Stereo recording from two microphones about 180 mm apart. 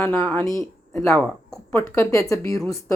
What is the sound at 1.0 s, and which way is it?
Speech, centre (ahead or behind).